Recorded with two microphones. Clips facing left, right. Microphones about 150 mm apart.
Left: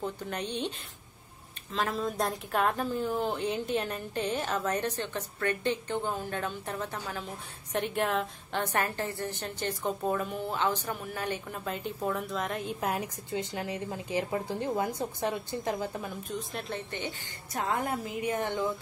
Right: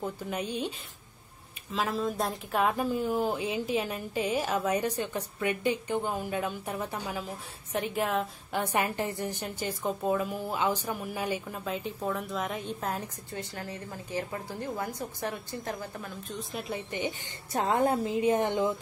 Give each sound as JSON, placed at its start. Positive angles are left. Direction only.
{"t": 0.0, "sound": "a woman's voice", "side_deg": -5}
{"t": 7.7, "sound": "a woman's voice", "side_deg": 0}
{"t": 13.3, "sound": "a woman's voice", "side_deg": 20}
{"t": 16.3, "sound": "speech", "side_deg": -5}
{"t": 17.5, "sound": "a woman's voice", "side_deg": -25}